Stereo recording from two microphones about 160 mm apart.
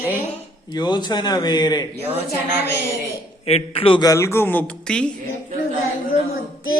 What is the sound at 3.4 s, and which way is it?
A man's voice, 40° left (ahead or behind).